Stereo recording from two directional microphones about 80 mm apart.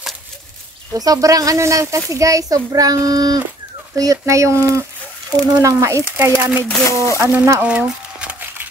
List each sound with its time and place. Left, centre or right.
0.9 s speech: right
6.3 s speech: centre
6.7 s speech: left
7.6 s a sound: centre